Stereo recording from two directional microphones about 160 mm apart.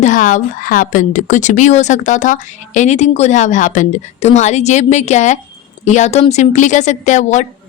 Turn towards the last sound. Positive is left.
turn(degrees=50)  # may be behind; listen again after turning